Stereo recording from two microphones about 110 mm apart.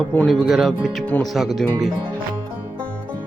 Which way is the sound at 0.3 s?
Centre (ahead or behind).